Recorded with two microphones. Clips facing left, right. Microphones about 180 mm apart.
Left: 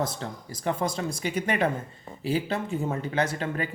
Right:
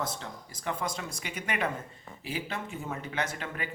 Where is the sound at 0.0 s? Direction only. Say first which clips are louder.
Left 5 dB; 35° left (ahead or behind).